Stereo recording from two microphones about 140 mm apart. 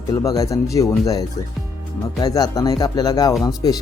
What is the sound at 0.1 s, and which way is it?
Speech, 25° left (ahead or behind).